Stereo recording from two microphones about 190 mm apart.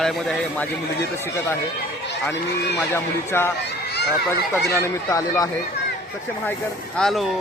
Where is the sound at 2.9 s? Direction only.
10° left (ahead or behind).